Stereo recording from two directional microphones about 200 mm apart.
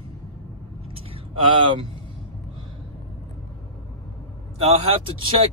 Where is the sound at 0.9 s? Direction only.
25° right (ahead or behind).